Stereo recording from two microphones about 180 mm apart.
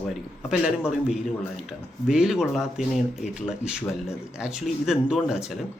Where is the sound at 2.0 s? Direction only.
5° right (ahead or behind).